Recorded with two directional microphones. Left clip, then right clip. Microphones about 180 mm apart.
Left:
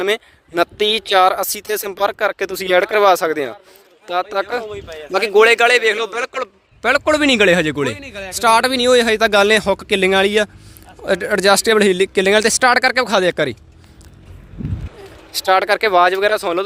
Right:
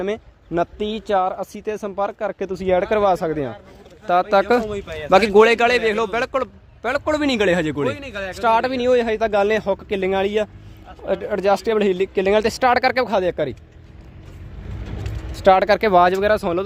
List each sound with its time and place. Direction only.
0.0 s speech: 20° left (ahead or behind)
4.0 s a man's voice: 5° right (ahead or behind)
4.7 s speech: 65° right (ahead or behind)
5.1 s a man's voice: 5° right (ahead or behind)
7.9 s a man's voice: 60° right (ahead or behind)
8.4 s speech: 15° left (ahead or behind)
15.4 s a man's voice: 5° left (ahead or behind)